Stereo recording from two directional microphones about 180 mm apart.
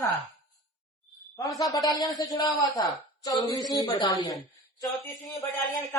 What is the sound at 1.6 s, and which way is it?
A man's voice, 20° left (ahead or behind).